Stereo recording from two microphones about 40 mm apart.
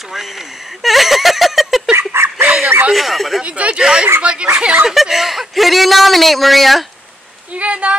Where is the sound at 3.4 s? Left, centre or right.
Right.